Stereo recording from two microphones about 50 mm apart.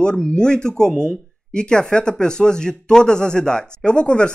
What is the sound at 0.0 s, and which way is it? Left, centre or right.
Speech, centre.